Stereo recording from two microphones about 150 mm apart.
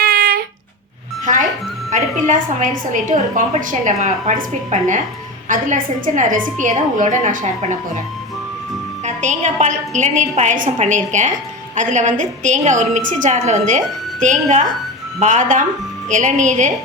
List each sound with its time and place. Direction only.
0.0 s a sound: 80° right
1.2 s music: 60° right (ahead or behind)
1.9 s a woman's voice: 60° right (ahead or behind)
9.0 s a woman's voice: 55° right (ahead or behind)